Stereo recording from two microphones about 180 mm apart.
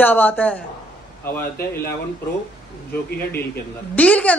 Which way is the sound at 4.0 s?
5° left (ahead or behind).